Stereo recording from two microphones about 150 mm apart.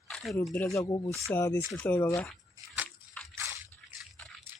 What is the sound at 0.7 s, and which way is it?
Speech, 25° left (ahead or behind).